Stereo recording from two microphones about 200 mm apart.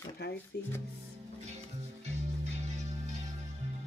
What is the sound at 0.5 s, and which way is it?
Speech, 55° left (ahead or behind).